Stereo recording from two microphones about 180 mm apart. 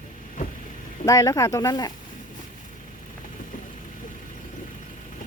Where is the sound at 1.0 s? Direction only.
15° left (ahead or behind).